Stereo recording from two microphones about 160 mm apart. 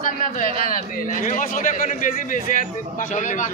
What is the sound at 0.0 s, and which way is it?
A man's voice, 60° left (ahead or behind).